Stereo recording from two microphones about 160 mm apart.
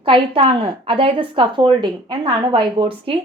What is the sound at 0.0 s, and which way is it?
A woman's voice, 35° right (ahead or behind).